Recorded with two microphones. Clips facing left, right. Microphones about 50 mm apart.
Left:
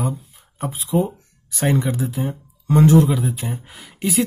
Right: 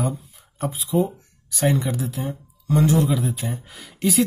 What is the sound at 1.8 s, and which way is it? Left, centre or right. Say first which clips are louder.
Speech: left 3 dB; left.